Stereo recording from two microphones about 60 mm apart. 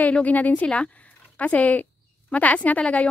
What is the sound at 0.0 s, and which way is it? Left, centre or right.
A woman's voice, left.